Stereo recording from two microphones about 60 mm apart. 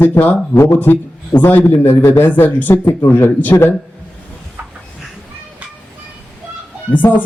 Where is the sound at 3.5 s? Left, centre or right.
Left.